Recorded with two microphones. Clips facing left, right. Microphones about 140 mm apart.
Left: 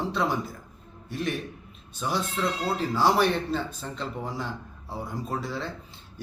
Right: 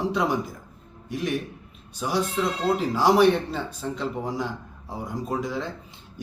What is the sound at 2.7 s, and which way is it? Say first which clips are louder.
Speech: right 4 dB; 15° right (ahead or behind).